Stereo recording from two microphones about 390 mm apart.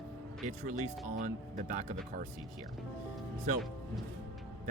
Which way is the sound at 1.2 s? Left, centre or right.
Centre.